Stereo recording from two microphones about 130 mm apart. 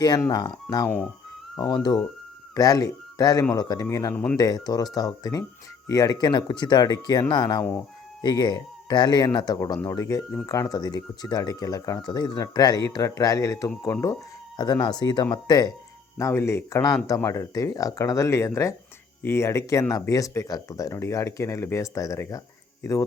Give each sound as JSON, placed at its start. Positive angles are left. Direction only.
{"t": 0.2, "sound": "speech", "side_deg": 30}
{"t": 0.9, "sound": "speech", "side_deg": 10}
{"t": 1.7, "sound": "speech", "side_deg": 35}
{"t": 4.1, "sound": "speech", "side_deg": 10}
{"t": 4.4, "sound": "speech", "side_deg": 30}
{"t": 16.1, "sound": "speech", "side_deg": 20}